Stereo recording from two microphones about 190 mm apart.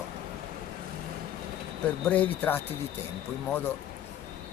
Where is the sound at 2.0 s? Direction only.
10° left (ahead or behind).